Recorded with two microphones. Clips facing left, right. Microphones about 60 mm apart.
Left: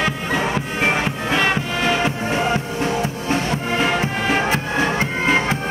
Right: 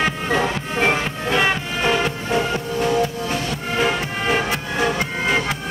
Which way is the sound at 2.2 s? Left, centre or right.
Left.